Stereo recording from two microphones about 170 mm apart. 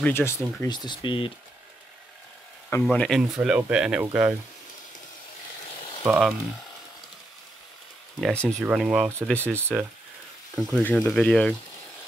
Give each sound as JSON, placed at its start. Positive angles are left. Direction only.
{"t": 0.0, "sound": "speech", "side_deg": 15}
{"t": 2.8, "sound": "speech", "side_deg": 5}
{"t": 3.3, "sound": "speech", "side_deg": -5}
{"t": 6.0, "sound": "speech", "side_deg": 0}
{"t": 8.2, "sound": "speech", "side_deg": 5}
{"t": 8.6, "sound": "speech", "side_deg": -10}
{"t": 9.3, "sound": "speech", "side_deg": 10}
{"t": 9.6, "sound": "speech", "side_deg": -15}
{"t": 10.5, "sound": "sizzle", "side_deg": 0}
{"t": 10.8, "sound": "speech", "side_deg": 5}